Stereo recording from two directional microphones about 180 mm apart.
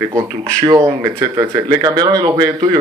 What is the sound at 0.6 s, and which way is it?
Speech, 20° right (ahead or behind).